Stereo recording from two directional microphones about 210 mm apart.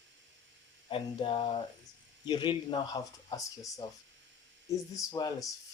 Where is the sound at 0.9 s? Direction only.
25° left (ahead or behind).